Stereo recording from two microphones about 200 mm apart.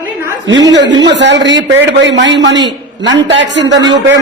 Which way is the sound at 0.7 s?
60° right (ahead or behind).